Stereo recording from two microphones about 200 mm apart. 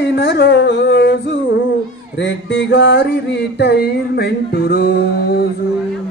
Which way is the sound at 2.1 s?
65° left (ahead or behind).